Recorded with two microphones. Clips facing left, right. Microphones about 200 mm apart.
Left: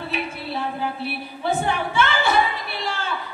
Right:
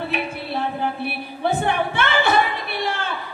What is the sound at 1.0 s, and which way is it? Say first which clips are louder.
A woman's voice: right 2 dB; 60° right (ahead or behind).